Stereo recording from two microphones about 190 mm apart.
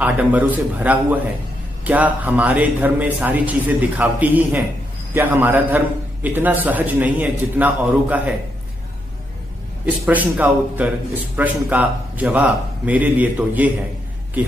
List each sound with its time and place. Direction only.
0.0 s a man's voice: 10° right (ahead or behind)
10.0 s a man's voice: 10° right (ahead or behind)